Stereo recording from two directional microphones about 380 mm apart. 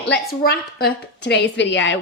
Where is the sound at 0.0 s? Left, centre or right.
Left.